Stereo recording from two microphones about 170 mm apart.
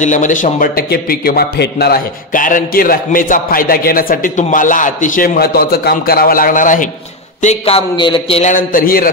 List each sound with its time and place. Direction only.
0.0 s a man's voice: 45° left (ahead or behind)
7.4 s a man's voice: 35° left (ahead or behind)
8.5 s a man's voice: 55° left (ahead or behind)